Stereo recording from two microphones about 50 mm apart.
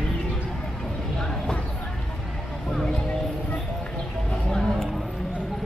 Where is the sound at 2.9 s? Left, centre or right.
Left.